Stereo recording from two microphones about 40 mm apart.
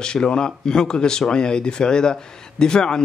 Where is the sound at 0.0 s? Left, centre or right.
Left.